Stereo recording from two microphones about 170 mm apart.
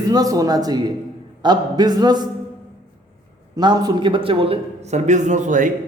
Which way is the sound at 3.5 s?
25° right (ahead or behind).